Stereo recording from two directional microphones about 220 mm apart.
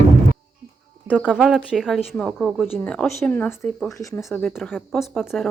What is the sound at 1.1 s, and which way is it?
Speech, 5° right (ahead or behind).